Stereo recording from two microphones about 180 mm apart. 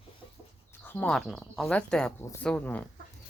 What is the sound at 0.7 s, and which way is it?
Speech, 10° left (ahead or behind).